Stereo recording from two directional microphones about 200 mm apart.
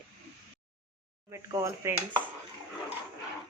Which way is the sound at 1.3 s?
15° right (ahead or behind).